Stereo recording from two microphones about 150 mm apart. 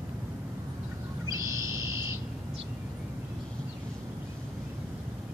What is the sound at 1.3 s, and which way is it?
Owl, 20° right (ahead or behind).